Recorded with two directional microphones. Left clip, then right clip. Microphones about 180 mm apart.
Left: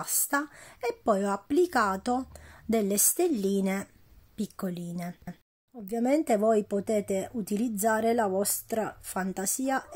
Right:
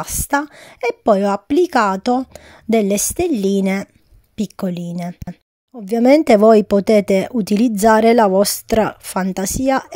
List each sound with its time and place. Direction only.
0.0 s speech: 40° right (ahead or behind)
5.9 s speech: 45° right (ahead or behind)